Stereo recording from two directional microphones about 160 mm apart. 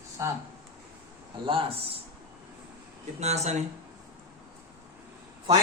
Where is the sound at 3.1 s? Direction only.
45° right (ahead or behind).